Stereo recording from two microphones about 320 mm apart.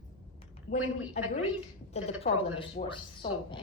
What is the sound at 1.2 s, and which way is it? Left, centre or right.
A woman's voice, left.